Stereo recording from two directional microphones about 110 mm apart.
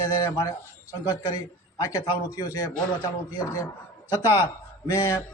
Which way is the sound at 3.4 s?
25° left (ahead or behind).